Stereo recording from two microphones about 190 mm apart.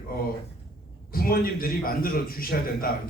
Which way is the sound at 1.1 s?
50° left (ahead or behind).